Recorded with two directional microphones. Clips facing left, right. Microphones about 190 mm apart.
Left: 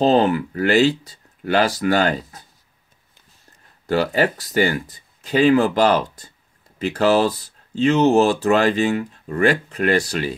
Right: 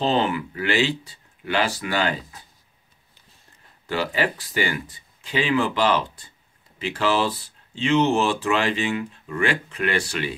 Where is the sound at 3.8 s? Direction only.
45° left (ahead or behind).